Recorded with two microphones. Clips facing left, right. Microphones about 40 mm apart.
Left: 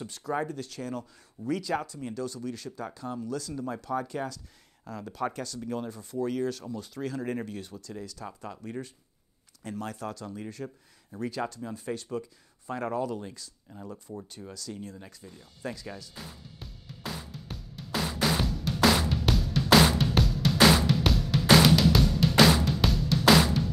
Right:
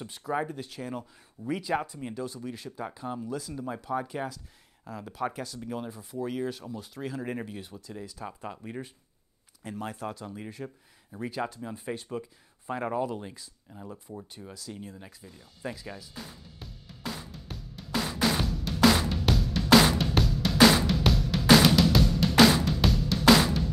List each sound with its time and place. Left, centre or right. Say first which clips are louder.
0.0 s speech: even; centre
13.7 s speech: left 1 dB; centre
14.3 s speech: left 2 dB; centre
16.5 s music: left 1 dB; centre